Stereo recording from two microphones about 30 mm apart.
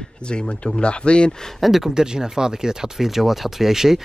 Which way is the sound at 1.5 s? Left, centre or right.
Centre.